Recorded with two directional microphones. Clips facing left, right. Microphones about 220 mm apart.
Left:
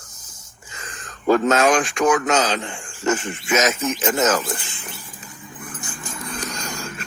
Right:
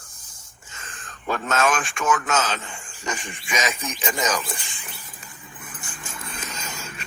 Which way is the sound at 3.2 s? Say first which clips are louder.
Left 7 dB; 15° right (ahead or behind).